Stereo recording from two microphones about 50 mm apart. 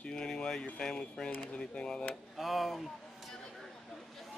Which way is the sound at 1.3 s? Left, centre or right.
Left.